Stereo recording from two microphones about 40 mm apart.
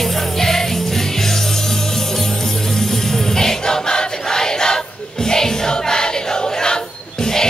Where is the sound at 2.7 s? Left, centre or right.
Centre.